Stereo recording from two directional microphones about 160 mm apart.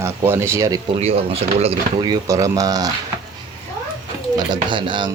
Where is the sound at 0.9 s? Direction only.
40° right (ahead or behind).